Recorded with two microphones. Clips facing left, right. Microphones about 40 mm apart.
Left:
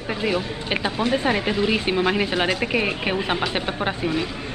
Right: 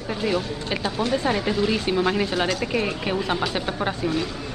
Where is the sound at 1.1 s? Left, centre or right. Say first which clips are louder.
Left 1 dB; left.